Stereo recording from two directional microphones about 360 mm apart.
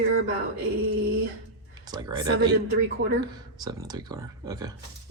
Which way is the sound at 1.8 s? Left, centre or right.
Centre.